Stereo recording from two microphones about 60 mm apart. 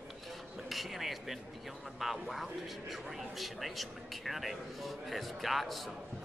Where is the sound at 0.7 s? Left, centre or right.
Centre.